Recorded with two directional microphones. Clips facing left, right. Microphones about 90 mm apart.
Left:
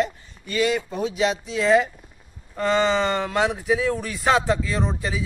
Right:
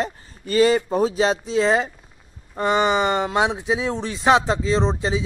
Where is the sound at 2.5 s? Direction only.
20° right (ahead or behind).